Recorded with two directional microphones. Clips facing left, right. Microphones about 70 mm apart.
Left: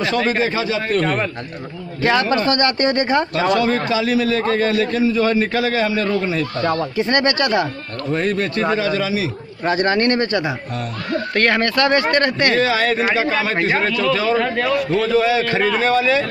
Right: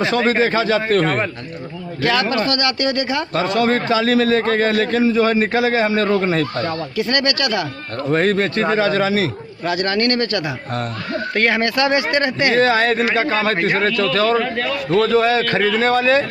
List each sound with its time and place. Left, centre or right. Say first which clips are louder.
0.0 s a man's voice: right 2 dB; right
2.0 s speech: left 2 dB; left
3.6 s a man's voice: right 2 dB; right
5.1 s a man's voice: right 1 dB; right
6.1 s speech: right 3 dB; right
6.6 s speech: left 3 dB; left
7.0 s speech: even; left
8.1 s speech: right 3 dB; right
9.7 s speech: left 2 dB; left
11.3 s speech: even; centre
12.5 s speech: right 2 dB; right
14.3 s a man's voice: left 1 dB; centre
15.1 s speech: right 1 dB; right